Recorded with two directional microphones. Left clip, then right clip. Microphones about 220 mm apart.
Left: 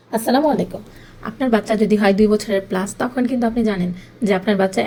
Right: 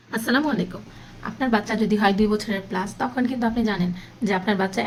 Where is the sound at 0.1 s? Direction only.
10° left (ahead or behind).